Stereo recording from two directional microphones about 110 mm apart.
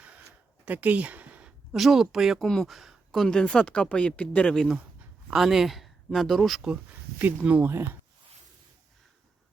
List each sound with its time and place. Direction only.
0.6 s speech: 15° right (ahead or behind)
7.2 s speech: 15° right (ahead or behind)